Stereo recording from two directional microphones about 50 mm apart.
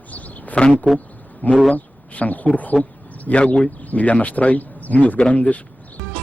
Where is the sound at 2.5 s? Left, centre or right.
Left.